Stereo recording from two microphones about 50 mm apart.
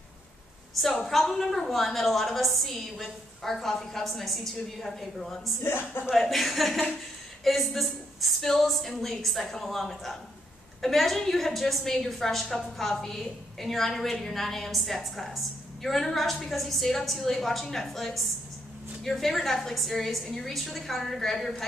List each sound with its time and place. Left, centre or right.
0.8 s a woman's voice: centre
5.6 s speech: left
6.0 s a woman's voice: centre